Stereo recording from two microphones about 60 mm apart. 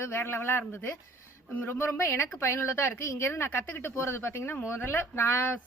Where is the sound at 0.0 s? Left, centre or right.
Left.